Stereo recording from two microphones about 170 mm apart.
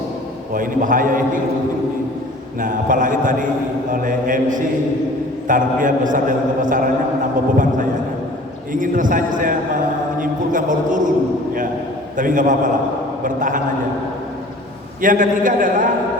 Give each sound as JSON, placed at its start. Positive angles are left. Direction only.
{"t": 0.5, "sound": "a man's voice", "side_deg": -55}
{"t": 2.6, "sound": "a man's voice", "side_deg": -50}
{"t": 8.7, "sound": "a man's voice", "side_deg": -50}
{"t": 12.1, "sound": "a man's voice", "side_deg": -50}
{"t": 15.0, "sound": "a man's voice", "side_deg": -50}